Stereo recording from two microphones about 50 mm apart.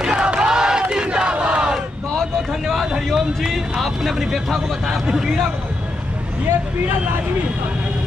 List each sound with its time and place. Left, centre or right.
0.0 s battle cry: centre
2.6 s a sound: centre
3.2 s a man's voice: centre